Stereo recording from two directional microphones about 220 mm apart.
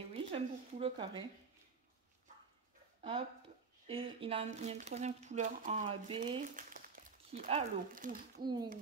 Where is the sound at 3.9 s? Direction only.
25° right (ahead or behind).